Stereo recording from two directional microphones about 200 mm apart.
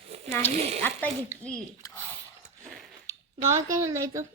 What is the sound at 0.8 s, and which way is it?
Speech, 5° left (ahead or behind).